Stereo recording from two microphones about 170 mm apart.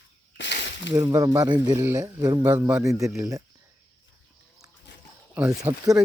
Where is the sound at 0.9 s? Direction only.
20° right (ahead or behind).